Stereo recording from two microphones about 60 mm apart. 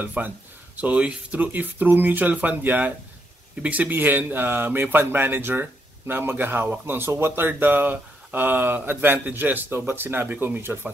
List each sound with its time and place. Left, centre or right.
0.2 s speech: right